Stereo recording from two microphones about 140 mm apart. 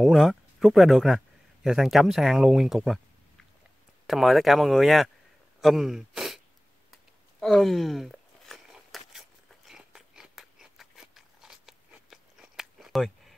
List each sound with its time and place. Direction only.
0.0 s speech: centre (ahead or behind)
4.1 s speech: centre (ahead or behind)
5.6 s gasp: centre (ahead or behind)
6.9 s a sound: centre (ahead or behind)